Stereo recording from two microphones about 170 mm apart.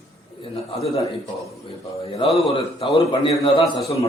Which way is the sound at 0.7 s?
30° left (ahead or behind).